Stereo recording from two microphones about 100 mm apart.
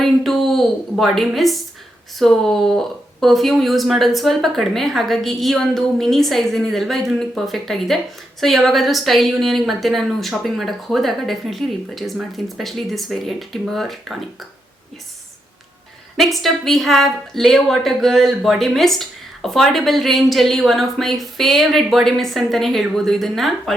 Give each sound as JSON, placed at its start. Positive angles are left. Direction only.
{"t": 0.0, "sound": "a woman's voice", "side_deg": 0}
{"t": 16.1, "sound": "a woman's voice", "side_deg": 0}